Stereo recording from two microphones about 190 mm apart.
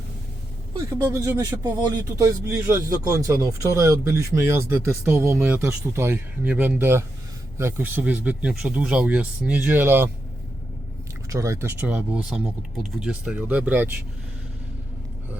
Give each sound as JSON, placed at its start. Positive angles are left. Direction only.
{"t": 0.7, "sound": "speech", "side_deg": -15}
{"t": 11.3, "sound": "speech", "side_deg": -15}